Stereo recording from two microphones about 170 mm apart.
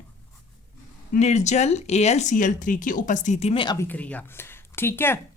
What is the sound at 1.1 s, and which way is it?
Speech, 40° left (ahead or behind).